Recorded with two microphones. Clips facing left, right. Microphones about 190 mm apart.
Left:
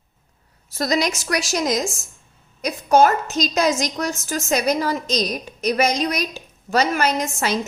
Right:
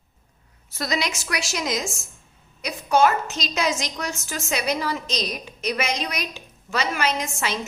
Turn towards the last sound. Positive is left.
turn(degrees=40)  # may be behind; listen again after turning